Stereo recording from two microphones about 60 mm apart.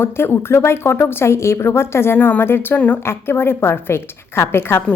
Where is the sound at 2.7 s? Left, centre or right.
Left.